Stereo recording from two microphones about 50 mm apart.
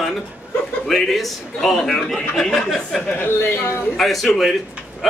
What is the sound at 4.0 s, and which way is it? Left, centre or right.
Speech, centre.